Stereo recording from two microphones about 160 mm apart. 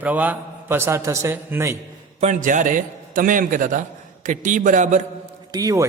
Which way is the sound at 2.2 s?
50° right (ahead or behind).